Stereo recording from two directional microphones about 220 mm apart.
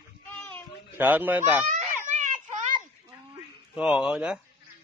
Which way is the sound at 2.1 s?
35° right (ahead or behind).